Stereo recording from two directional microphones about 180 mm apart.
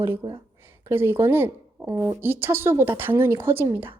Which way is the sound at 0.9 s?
10° right (ahead or behind).